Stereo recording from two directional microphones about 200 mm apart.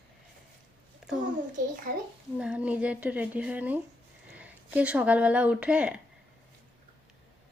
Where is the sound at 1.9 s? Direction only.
45° right (ahead or behind).